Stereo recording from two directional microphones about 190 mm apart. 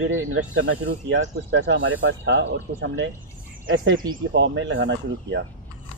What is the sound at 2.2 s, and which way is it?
Speech, 70° right (ahead or behind).